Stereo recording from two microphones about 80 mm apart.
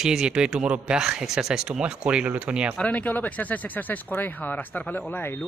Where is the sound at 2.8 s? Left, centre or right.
Centre.